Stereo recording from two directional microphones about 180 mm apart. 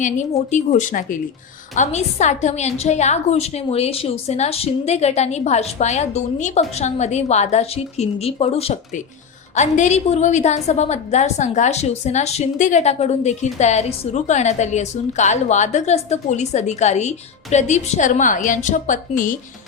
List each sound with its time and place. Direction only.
0.0 s a woman's voice: 40° left (ahead or behind)